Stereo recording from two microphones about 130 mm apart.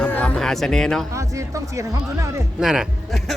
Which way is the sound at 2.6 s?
5° right (ahead or behind).